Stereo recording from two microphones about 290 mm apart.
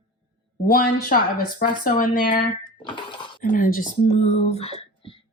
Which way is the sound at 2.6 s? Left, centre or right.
Centre.